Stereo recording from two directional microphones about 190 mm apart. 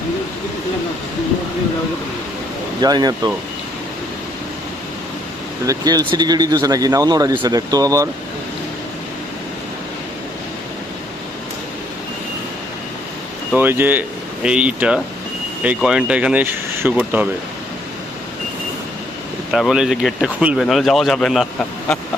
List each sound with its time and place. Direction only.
2.8 s speech: 20° right (ahead or behind)
5.6 s speech: 20° right (ahead or behind)
13.5 s speech: 10° right (ahead or behind)
19.5 s speech: centre (ahead or behind)